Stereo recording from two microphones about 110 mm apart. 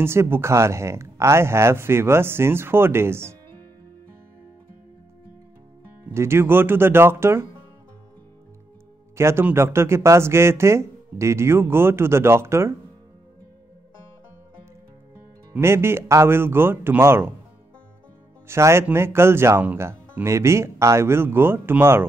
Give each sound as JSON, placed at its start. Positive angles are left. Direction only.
{"t": 0.0, "sound": "speech", "side_deg": -25}
{"t": 6.1, "sound": "speech", "side_deg": -20}
{"t": 9.1, "sound": "speech", "side_deg": -25}
{"t": 15.6, "sound": "speech", "side_deg": -25}
{"t": 18.5, "sound": "speech", "side_deg": -25}